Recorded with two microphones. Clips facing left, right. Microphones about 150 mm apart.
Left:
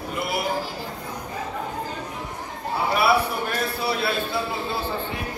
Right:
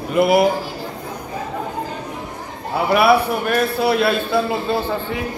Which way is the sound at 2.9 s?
70° right (ahead or behind).